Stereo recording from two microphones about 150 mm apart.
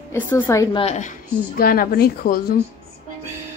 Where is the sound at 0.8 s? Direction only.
45° left (ahead or behind).